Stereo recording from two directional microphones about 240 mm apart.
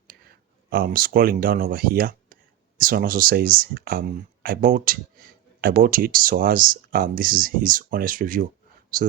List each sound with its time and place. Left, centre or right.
0.7 s speech: right